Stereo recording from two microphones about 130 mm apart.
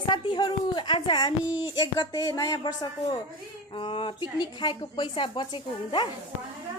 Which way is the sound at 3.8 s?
40° left (ahead or behind).